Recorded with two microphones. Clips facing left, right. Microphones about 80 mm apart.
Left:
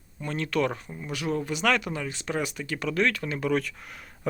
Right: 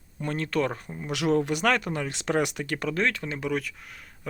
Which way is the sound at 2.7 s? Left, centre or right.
Right.